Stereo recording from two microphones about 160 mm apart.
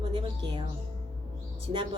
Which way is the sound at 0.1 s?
30° right (ahead or behind).